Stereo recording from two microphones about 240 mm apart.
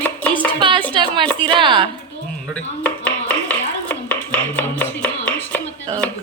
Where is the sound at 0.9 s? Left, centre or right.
Centre.